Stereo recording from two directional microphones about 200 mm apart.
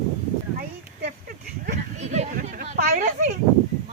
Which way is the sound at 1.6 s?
35° right (ahead or behind).